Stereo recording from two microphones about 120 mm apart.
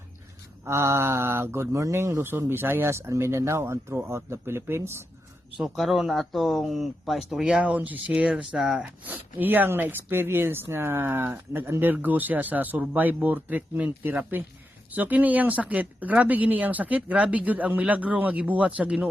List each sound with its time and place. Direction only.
0.6 s speech: 25° right (ahead or behind)
5.5 s speech: centre (ahead or behind)
9.0 s speech: 15° right (ahead or behind)